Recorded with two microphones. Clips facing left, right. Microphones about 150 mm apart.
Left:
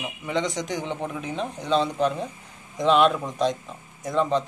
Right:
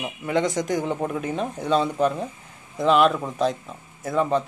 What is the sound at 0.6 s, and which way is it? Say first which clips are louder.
A man's voice: right 5 dB; 5° right (ahead or behind).